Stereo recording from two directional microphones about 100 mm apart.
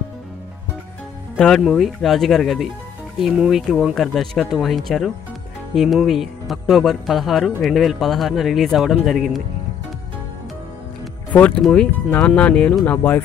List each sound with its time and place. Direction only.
1.3 s speech: 10° left (ahead or behind)
11.3 s speech: 15° left (ahead or behind)